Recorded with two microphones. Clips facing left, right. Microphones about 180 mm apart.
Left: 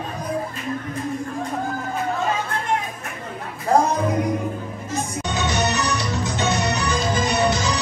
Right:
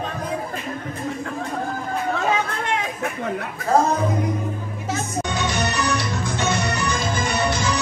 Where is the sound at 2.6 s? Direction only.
75° right (ahead or behind).